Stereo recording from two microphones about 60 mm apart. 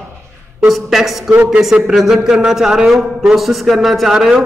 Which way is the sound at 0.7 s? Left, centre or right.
Centre.